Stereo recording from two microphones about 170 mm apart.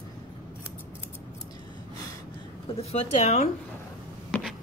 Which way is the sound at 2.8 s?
40° left (ahead or behind).